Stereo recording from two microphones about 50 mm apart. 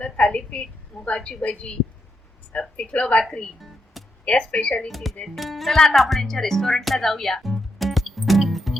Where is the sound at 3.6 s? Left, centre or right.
Centre.